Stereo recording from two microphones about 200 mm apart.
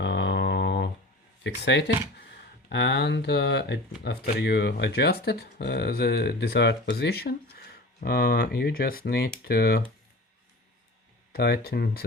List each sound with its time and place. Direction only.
0.0 s a sound: 60° left (ahead or behind)
1.5 s speech: 60° left (ahead or behind)
11.3 s speech: 50° left (ahead or behind)